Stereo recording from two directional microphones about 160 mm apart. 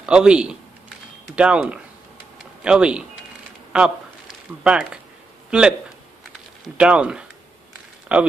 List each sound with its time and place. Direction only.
0.0 s a man's voice: 5° right (ahead or behind)
6.8 s speech: 5° right (ahead or behind)